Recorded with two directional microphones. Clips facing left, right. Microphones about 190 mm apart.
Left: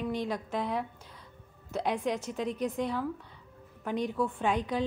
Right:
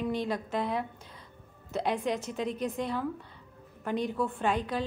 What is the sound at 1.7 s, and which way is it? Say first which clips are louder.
A woman's voice: right 1 dB; 10° left (ahead or behind).